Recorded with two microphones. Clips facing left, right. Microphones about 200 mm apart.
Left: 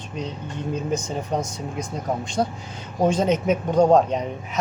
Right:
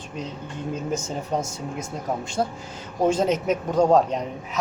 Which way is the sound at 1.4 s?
25° right (ahead or behind).